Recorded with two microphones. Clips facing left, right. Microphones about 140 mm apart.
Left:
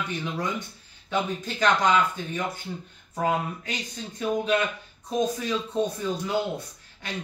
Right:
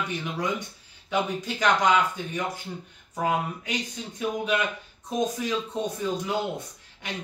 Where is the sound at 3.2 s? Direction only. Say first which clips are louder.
Even; 10° right (ahead or behind).